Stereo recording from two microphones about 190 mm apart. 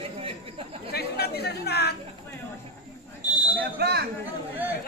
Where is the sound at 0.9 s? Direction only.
55° left (ahead or behind).